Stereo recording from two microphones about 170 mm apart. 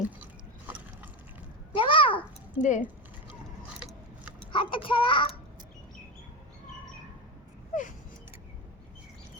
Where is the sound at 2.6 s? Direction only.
45° left (ahead or behind).